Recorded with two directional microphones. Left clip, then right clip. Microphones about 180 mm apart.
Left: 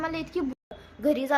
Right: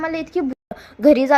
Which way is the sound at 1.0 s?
40° right (ahead or behind).